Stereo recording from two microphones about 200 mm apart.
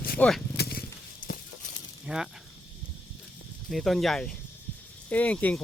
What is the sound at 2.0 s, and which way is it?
Speech, 5° right (ahead or behind).